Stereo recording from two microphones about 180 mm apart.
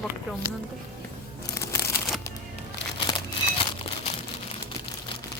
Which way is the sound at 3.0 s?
30° left (ahead or behind).